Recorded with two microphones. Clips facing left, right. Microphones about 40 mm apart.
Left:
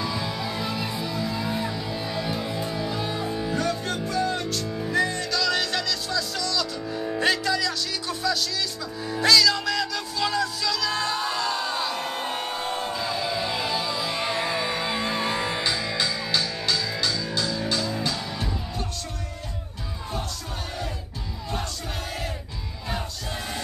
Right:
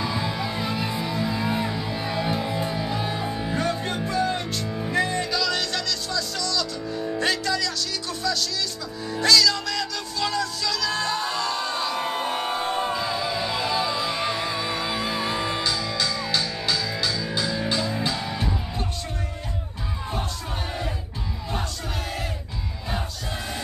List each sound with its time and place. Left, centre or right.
0.0 s music: centre
5.4 s music: centre
12.0 s a sound: centre
13.0 s music: centre
15.6 s music: centre
16.2 s music: centre
17.3 s music: centre